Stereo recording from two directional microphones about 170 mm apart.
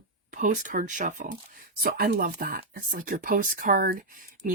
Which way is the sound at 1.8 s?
60° right (ahead or behind).